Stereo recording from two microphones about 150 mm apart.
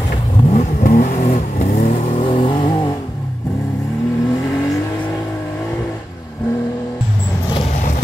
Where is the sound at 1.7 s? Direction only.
65° left (ahead or behind).